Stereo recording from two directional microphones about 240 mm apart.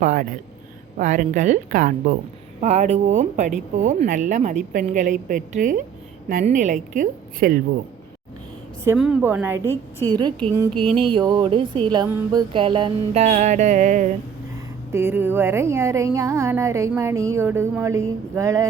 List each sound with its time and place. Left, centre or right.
0.0 s speech: right
8.8 s speech: centre; by 14.1 s right
14.9 s speech: centre